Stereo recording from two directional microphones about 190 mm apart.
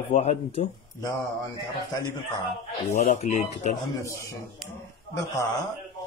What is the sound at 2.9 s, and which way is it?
Speech, 35° left (ahead or behind).